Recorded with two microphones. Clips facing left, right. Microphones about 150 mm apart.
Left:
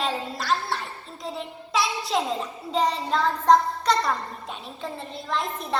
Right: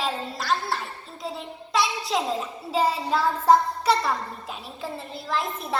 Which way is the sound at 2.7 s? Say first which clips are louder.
Right 1 dB; 5° right (ahead or behind).